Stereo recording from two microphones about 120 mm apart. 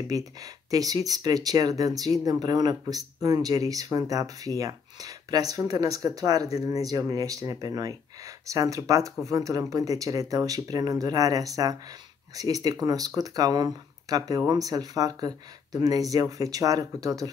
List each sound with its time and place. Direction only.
0.1 s speech: 30° right (ahead or behind)